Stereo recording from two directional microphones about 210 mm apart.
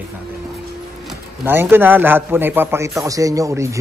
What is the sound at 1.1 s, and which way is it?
A man's voice, 10° right (ahead or behind).